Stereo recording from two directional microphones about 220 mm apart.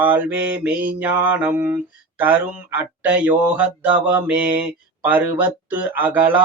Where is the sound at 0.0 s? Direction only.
10° right (ahead or behind).